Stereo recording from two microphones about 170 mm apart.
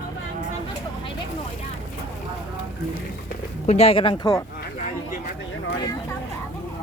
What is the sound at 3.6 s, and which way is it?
Speech, 35° left (ahead or behind).